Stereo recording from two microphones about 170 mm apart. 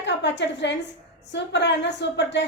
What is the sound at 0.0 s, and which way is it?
A woman's voice, 90° left.